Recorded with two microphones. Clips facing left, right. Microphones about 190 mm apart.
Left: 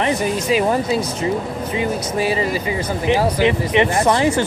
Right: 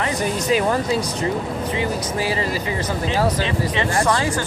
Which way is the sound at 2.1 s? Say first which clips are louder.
Left 3 dB; 20° left (ahead or behind).